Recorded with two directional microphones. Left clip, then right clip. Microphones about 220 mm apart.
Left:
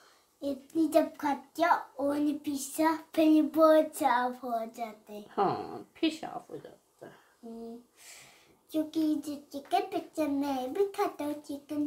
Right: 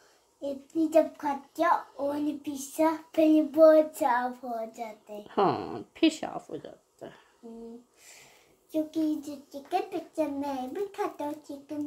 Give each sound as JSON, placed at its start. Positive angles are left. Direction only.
{"t": 0.4, "sound": "a child's voice", "side_deg": 25}
{"t": 5.3, "sound": "a woman's voice", "side_deg": -45}
{"t": 8.7, "sound": "a child's voice", "side_deg": 20}